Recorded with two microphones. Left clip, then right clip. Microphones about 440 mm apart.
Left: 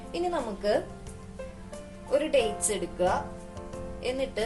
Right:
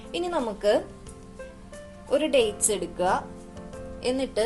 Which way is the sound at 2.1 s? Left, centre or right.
Centre.